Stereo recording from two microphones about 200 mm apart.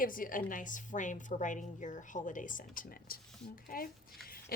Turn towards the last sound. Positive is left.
turn(degrees=50)  # may be behind; listen again after turning